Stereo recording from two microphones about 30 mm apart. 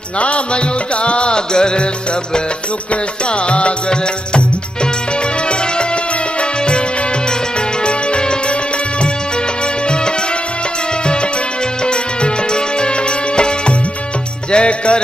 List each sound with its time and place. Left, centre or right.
1.0 s music: left
1.5 s music: left
3.4 s music: left
7.8 s music: left
11.8 s music: left
14.5 s music: left